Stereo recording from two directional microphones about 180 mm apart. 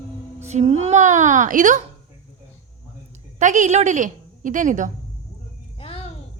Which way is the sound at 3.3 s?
45° right (ahead or behind).